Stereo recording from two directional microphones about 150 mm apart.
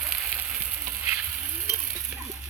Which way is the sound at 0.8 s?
15° right (ahead or behind).